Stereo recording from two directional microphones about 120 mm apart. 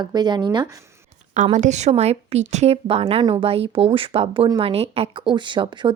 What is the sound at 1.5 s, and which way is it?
A woman's voice, 70° right (ahead or behind).